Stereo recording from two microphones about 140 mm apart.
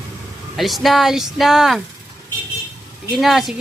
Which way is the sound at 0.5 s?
Centre (ahead or behind).